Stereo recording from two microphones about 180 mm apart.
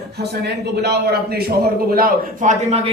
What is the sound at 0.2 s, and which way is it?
A man's voice, 65° right (ahead or behind).